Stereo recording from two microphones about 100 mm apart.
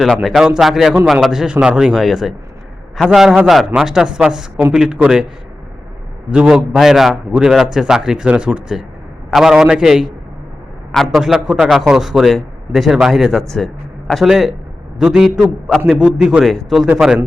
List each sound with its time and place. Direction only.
0.0 s a man's voice: centre (ahead or behind)
6.3 s a man's voice: 10° right (ahead or behind)